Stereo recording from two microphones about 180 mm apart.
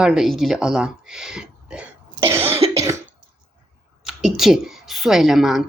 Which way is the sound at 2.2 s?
15° right (ahead or behind).